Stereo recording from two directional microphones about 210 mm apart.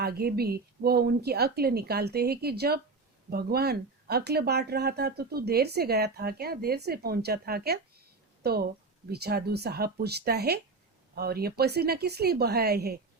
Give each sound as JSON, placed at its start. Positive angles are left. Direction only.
{"t": 0.0, "sound": "speech", "side_deg": -50}